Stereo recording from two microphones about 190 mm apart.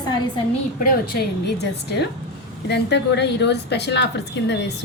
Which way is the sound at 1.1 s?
60° left (ahead or behind).